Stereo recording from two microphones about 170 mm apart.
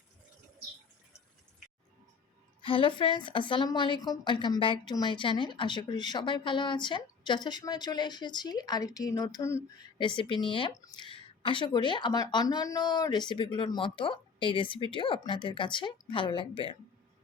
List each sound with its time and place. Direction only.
2.6 s a woman's voice: 30° left (ahead or behind)
10.0 s a woman's voice: 30° left (ahead or behind)